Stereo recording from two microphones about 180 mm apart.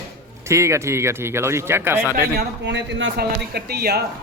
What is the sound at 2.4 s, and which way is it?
Speech, 80° right.